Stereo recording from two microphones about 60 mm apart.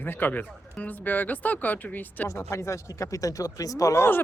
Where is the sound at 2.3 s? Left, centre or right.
Left.